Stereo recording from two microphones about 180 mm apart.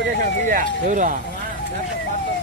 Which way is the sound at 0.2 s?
45° right (ahead or behind).